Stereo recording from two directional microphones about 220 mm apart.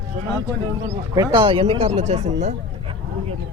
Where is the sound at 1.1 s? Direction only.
25° right (ahead or behind).